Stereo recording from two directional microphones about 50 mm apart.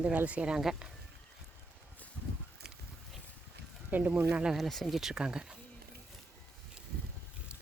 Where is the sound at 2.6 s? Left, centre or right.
Centre.